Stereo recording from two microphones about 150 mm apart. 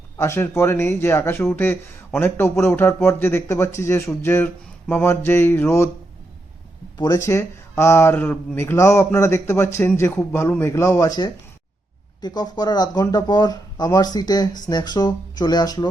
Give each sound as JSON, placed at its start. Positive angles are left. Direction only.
{"t": 0.2, "sound": "speech", "side_deg": 15}
{"t": 7.0, "sound": "speech", "side_deg": 20}